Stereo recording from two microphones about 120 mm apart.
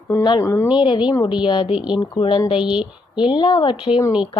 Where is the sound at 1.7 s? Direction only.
5° right (ahead or behind).